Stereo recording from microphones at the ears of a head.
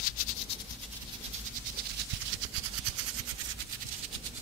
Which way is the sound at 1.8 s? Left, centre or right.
Right.